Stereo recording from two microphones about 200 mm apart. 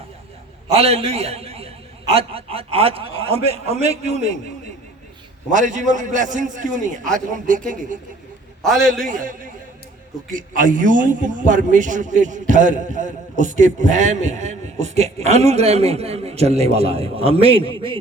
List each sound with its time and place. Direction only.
0.8 s a man's voice: 30° right (ahead or behind)
5.5 s a man's voice: 40° right (ahead or behind)
8.6 s a man's voice: centre (ahead or behind)
9.0 s a man's voice: 40° right (ahead or behind); by 18.0 s 25° right (ahead or behind)